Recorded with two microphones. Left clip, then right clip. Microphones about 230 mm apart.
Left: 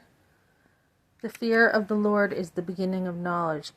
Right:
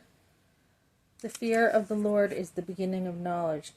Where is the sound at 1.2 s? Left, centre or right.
Centre.